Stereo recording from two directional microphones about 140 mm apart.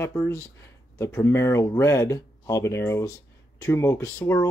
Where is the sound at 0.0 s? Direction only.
20° left (ahead or behind).